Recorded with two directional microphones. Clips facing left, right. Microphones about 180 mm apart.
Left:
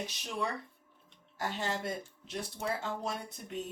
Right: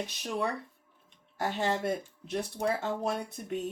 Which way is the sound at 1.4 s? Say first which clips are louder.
Right 5 dB; 55° right (ahead or behind).